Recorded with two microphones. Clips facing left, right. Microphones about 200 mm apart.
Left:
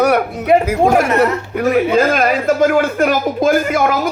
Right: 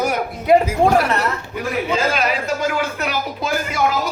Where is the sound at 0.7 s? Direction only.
55° left (ahead or behind).